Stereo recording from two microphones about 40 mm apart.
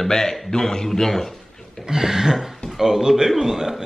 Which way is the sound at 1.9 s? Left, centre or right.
Centre.